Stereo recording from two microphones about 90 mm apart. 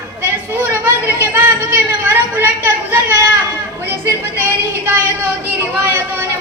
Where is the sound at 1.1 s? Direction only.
30° right (ahead or behind).